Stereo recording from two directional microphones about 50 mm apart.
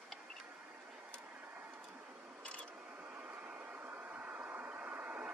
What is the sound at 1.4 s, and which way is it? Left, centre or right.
Vehicle, right.